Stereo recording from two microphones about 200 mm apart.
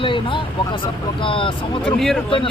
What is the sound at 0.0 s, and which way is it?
Vehicle, 25° left (ahead or behind).